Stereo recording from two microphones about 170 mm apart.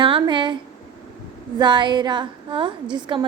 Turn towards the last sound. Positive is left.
turn(degrees=-30)  # may be behind; listen again after turning